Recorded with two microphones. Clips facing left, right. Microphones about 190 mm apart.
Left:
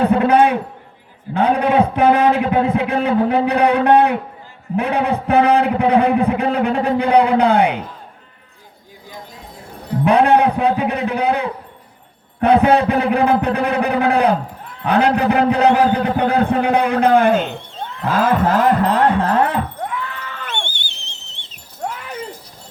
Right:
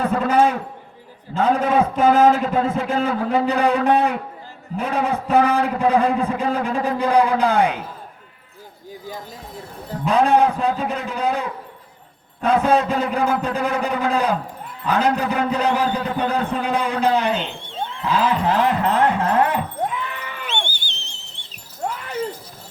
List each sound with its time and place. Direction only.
0.0 s a man's voice: 65° left (ahead or behind)
10.0 s a man's voice: 65° left (ahead or behind)
18.0 s wind chime: 50° left (ahead or behind)
19.8 s livestock: 20° right (ahead or behind)